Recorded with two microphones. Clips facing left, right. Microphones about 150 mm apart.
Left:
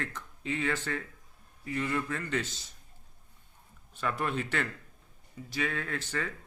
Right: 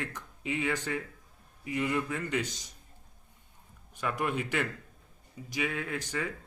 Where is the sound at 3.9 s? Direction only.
15° right (ahead or behind).